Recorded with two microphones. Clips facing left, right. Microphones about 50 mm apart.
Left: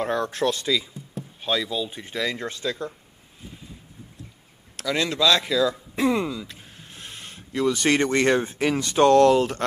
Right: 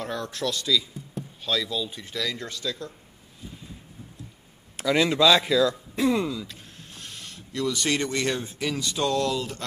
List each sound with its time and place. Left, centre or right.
0.0 s speech: left
1.4 s speech: left
4.7 s speech: centre
5.9 s speech: centre
7.0 s speech: left